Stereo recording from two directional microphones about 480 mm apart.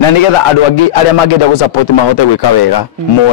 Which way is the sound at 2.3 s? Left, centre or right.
Left.